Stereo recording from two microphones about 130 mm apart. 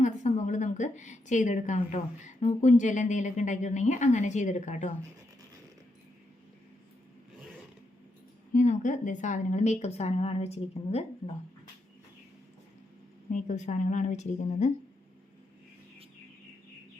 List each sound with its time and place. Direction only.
0.0 s a woman's voice: 70° left (ahead or behind)
8.5 s a woman's voice: 70° left (ahead or behind); by 11.0 s 50° left (ahead or behind)
13.3 s a woman's voice: 65° left (ahead or behind)